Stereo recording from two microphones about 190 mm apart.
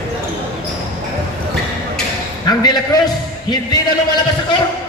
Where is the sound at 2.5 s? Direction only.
20° left (ahead or behind).